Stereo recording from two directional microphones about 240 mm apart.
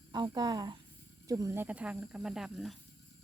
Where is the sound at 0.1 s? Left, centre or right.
Centre.